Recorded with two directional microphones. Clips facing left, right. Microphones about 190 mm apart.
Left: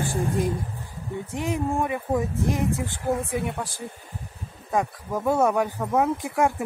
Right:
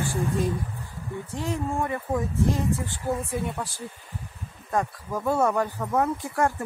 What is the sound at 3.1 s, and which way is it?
Speech, 70° left (ahead or behind).